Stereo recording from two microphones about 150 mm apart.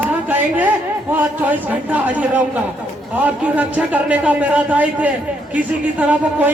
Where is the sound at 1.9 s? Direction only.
10° right (ahead or behind).